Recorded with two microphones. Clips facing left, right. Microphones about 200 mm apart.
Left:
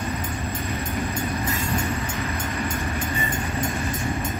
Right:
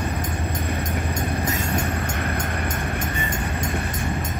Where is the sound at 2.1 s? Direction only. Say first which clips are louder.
Right 1 dB; 55° right (ahead or behind).